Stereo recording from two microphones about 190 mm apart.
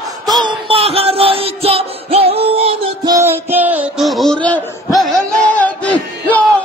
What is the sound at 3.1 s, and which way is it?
Music, 15° right (ahead or behind).